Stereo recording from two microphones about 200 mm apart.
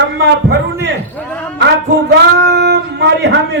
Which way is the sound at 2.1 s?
55° right (ahead or behind).